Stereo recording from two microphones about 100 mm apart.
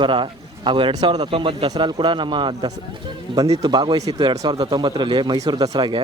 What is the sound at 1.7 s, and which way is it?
A man's voice, 45° right (ahead or behind).